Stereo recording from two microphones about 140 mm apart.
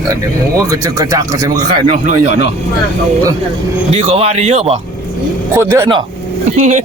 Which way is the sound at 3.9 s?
45° right (ahead or behind).